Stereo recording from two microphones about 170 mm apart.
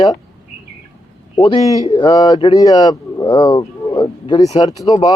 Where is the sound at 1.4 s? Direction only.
30° left (ahead or behind).